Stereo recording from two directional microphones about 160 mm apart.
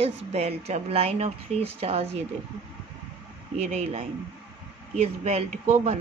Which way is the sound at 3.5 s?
45° right (ahead or behind).